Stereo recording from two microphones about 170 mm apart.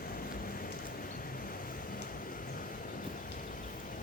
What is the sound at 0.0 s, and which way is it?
Vehicle, 60° left (ahead or behind).